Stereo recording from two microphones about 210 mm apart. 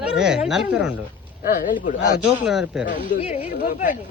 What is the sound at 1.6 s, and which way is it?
Speech, 40° left (ahead or behind).